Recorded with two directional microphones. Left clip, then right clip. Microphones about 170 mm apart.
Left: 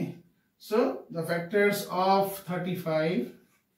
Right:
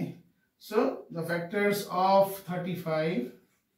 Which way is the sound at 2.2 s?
15° right (ahead or behind).